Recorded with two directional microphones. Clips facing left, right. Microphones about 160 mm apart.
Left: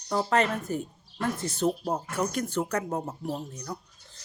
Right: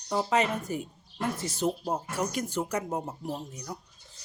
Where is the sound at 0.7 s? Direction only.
10° right (ahead or behind).